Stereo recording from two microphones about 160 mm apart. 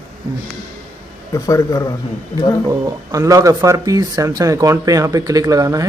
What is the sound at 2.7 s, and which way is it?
Speech, 20° right (ahead or behind).